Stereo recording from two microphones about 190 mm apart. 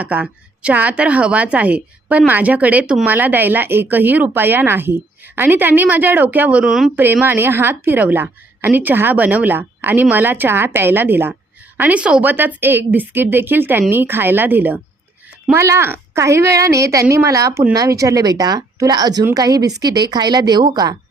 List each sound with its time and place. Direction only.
0.0 s a woman's voice: 5° right (ahead or behind)